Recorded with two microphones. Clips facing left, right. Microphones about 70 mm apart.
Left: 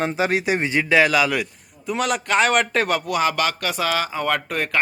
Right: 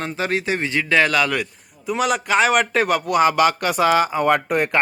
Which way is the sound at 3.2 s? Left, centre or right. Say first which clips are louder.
Right 5 dB; centre.